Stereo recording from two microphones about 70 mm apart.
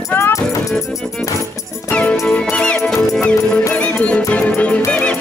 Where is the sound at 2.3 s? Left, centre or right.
Centre.